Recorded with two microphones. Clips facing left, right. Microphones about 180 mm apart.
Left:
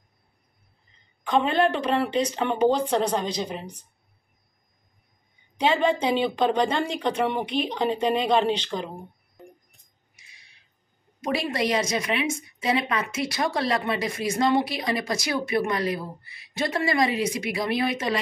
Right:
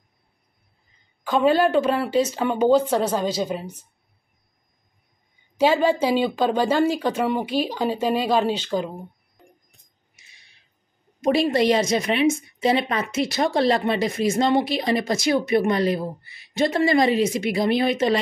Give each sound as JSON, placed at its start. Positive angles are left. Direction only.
{"t": 1.3, "sound": "speech", "side_deg": -5}
{"t": 5.6, "sound": "speech", "side_deg": -5}
{"t": 11.3, "sound": "a woman's voice", "side_deg": -25}